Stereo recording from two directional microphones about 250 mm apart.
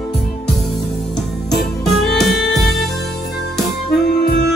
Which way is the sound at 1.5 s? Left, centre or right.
Centre.